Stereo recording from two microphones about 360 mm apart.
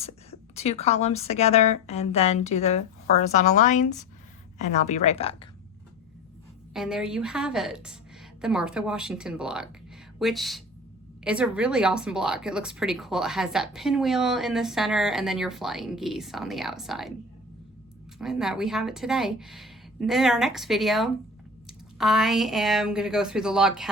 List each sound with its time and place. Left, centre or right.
0.0 s a woman's voice: centre
6.7 s speech: centre
18.2 s speech: centre